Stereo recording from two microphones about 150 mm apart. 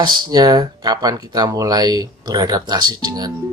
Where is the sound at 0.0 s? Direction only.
30° right (ahead or behind).